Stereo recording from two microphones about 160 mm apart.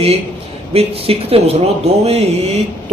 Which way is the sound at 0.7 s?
40° right (ahead or behind).